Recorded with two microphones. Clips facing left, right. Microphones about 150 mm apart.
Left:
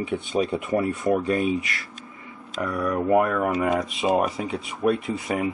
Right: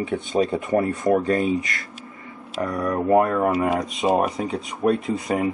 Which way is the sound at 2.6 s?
40° right (ahead or behind).